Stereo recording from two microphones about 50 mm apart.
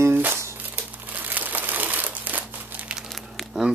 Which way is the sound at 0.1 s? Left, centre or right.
Right.